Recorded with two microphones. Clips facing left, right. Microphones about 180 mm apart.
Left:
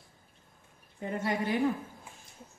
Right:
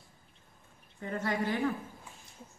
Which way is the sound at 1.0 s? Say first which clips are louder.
Left 1 dB; 15° left (ahead or behind).